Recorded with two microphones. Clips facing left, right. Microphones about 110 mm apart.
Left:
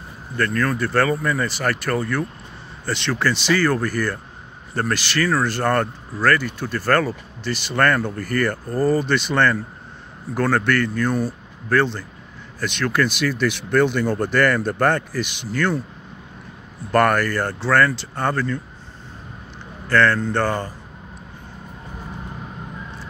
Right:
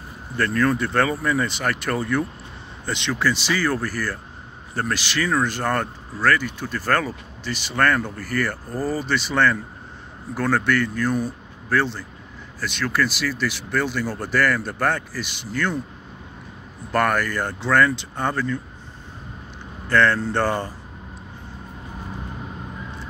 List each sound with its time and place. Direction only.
0.4 s speech: 25° right (ahead or behind); by 15.6 s 5° right (ahead or behind)
16.9 s speech: 5° right (ahead or behind)
19.9 s speech: 25° right (ahead or behind)